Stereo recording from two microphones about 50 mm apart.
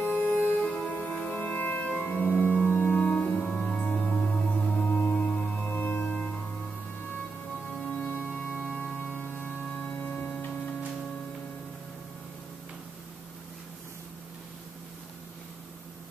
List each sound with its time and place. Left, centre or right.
0.0 s music: left
0.6 s music: left
4.8 s music: left
7.9 s music: left
8.5 s organ: centre; by 10.3 s left
10.4 s music: left